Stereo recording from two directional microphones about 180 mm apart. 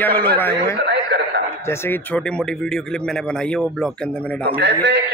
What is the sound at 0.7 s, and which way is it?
Radio, 70° right (ahead or behind).